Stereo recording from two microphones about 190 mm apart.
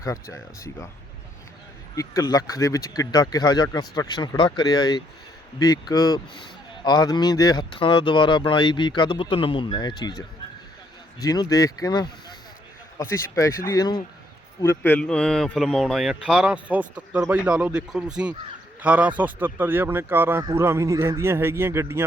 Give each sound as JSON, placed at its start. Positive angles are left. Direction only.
{"t": 0.0, "sound": "speech", "side_deg": 15}
{"t": 2.0, "sound": "speech", "side_deg": 20}